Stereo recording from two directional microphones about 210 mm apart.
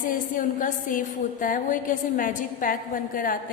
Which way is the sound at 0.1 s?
40° left (ahead or behind).